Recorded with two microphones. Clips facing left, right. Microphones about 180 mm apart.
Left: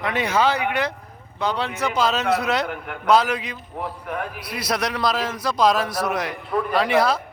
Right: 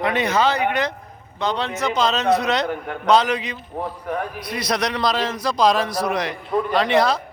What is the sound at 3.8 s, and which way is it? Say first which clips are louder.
Speech: right 2 dB; 35° right (ahead or behind).